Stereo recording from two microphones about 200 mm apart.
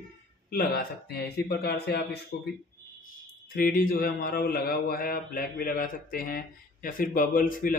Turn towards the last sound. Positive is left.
turn(degrees=45)  # may be behind; listen again after turning